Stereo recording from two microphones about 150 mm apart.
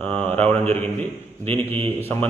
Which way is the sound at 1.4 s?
40° right (ahead or behind).